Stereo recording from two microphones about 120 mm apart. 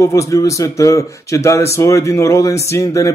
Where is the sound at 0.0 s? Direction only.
25° left (ahead or behind).